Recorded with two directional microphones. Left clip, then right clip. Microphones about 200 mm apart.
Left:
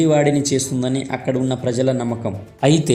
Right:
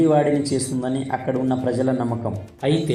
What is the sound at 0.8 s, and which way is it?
A man's voice, 50° left (ahead or behind).